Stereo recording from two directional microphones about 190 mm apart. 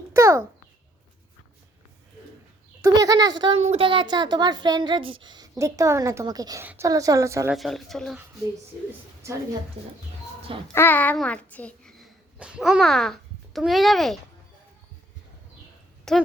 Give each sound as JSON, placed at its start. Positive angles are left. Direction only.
{"t": 0.1, "sound": "a sound", "side_deg": -15}
{"t": 2.8, "sound": "a woman's voice", "side_deg": -20}
{"t": 7.5, "sound": "speech", "side_deg": 0}
{"t": 10.8, "sound": "a child's voice", "side_deg": 10}
{"t": 16.1, "sound": "a woman's voice", "side_deg": 0}